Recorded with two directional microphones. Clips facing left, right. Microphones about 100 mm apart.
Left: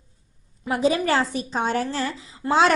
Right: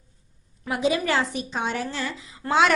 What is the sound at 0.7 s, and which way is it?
A woman's voice, 35° left (ahead or behind).